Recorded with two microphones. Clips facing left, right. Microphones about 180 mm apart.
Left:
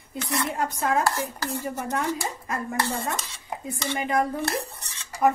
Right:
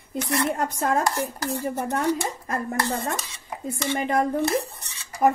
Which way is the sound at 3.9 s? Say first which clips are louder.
Right 1 dB; 30° right (ahead or behind).